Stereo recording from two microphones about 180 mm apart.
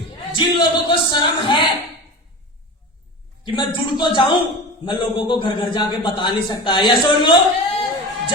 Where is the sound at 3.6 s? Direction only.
25° left (ahead or behind).